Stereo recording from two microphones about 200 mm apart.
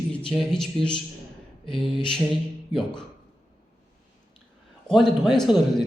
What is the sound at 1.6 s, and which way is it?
Mantra, 25° left (ahead or behind).